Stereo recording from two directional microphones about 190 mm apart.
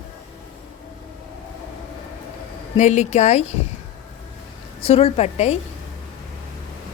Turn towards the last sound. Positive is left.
turn(degrees=35)  # may be behind; listen again after turning